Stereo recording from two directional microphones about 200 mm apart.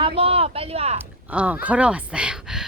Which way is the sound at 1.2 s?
5° right (ahead or behind).